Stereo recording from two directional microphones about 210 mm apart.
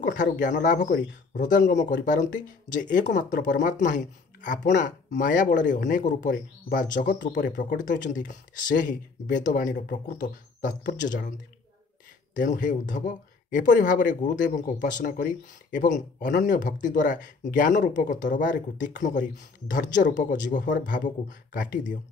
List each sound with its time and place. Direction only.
0.0 s speech: 40° left (ahead or behind)
12.4 s speech: 40° left (ahead or behind)